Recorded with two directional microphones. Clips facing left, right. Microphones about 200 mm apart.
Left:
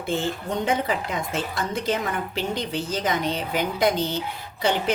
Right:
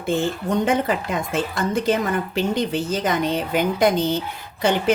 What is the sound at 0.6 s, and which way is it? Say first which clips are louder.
A woman's voice: right 2 dB; 50° right (ahead or behind).